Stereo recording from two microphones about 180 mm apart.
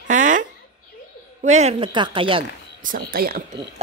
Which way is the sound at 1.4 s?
40° right (ahead or behind).